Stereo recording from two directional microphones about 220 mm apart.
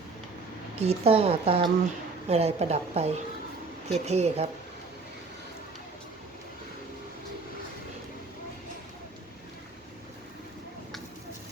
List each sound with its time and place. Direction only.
0.8 s speech: 30° right (ahead or behind)